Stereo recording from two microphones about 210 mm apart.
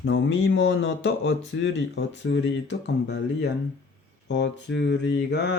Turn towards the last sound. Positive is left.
turn(degrees=55)  # may be behind; listen again after turning